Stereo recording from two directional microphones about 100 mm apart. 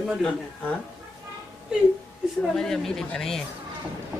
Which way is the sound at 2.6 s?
5° left (ahead or behind).